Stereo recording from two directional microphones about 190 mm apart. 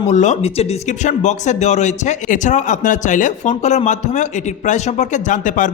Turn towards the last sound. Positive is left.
turn(degrees=40)  # may be behind; listen again after turning